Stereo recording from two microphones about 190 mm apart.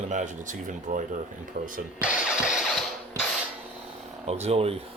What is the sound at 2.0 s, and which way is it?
Speech, 5° right (ahead or behind).